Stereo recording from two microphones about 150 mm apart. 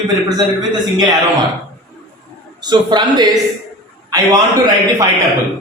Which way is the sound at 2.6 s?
30° right (ahead or behind).